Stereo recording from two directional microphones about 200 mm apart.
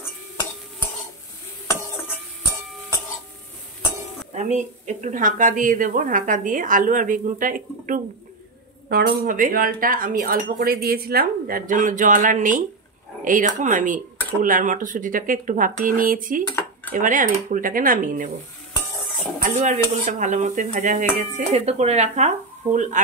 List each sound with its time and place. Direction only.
4.4 s a woman's voice: 35° right (ahead or behind)
8.8 s a woman's voice: 55° right (ahead or behind)
19.4 s a woman's voice: 40° right (ahead or behind)